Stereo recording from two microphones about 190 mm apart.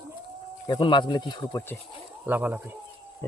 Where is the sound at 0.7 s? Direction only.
25° left (ahead or behind).